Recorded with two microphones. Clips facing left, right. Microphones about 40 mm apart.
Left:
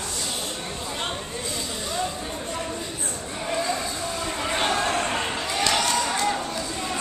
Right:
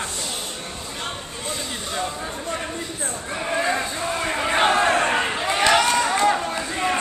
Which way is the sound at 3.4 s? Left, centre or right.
Right.